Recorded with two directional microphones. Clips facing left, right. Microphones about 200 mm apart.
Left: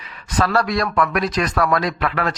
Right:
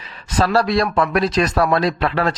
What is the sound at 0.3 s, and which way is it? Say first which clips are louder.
Speech: right 2 dB; 25° right (ahead or behind).